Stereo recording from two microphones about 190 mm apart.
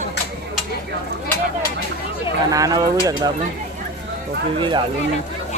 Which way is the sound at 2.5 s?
20° right (ahead or behind).